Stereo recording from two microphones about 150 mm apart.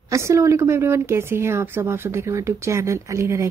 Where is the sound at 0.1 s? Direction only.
20° right (ahead or behind).